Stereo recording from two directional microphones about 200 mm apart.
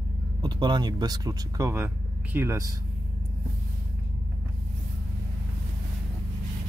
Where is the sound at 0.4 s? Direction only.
20° right (ahead or behind).